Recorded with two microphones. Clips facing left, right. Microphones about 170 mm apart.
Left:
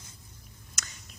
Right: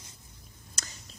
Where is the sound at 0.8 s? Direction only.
30° right (ahead or behind).